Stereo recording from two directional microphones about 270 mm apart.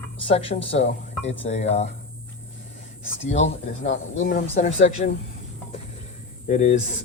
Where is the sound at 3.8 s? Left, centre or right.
Left.